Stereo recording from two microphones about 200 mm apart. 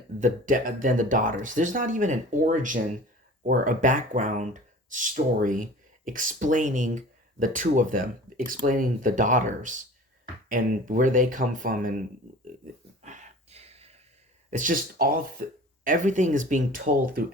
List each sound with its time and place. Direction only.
0.2 s speech: 40° right (ahead or behind)
13.0 s a sound: 35° right (ahead or behind)
14.5 s speech: 40° right (ahead or behind)